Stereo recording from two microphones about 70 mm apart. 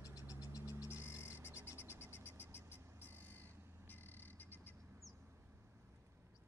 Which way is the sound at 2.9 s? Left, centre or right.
Right.